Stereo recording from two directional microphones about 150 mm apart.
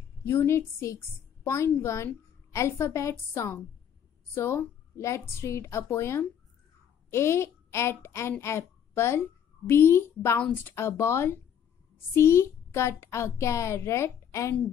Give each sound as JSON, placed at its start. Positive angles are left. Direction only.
{"t": 0.2, "sound": "a woman's voice", "side_deg": 15}